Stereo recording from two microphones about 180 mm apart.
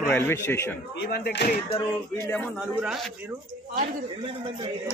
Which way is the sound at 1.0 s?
65° left (ahead or behind).